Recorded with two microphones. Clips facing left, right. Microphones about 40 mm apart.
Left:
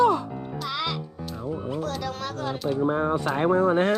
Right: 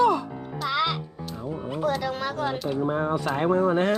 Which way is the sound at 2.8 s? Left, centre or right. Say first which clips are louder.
Left 2 dB; left.